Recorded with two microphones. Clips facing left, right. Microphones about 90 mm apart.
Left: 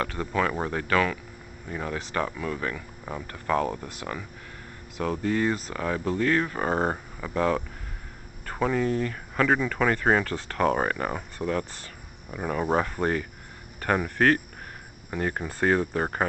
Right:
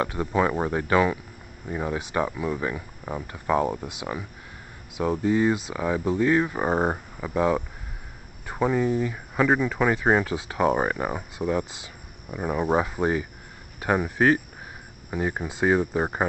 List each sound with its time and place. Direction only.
0.0 s speech: 20° right (ahead or behind)